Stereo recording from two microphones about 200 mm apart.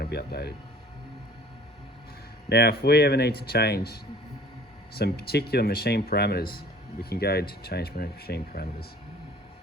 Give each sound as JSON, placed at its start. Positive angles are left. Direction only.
{"t": 0.0, "sound": "speech", "side_deg": 50}
{"t": 2.5, "sound": "speech", "side_deg": 55}